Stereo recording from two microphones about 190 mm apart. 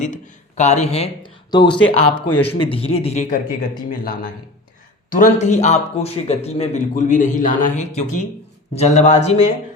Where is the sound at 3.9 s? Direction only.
50° left (ahead or behind).